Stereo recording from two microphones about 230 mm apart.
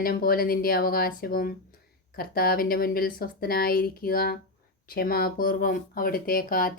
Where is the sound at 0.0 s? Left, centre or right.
Left.